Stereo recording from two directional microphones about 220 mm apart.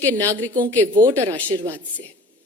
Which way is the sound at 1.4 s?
15° right (ahead or behind).